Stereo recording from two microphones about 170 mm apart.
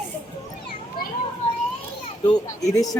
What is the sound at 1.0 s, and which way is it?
Children playing, 60° left (ahead or behind).